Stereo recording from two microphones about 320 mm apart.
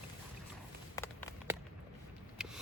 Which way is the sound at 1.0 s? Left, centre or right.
Centre.